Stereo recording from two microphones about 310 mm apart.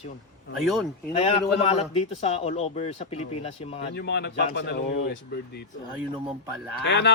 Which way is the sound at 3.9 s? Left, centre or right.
Left.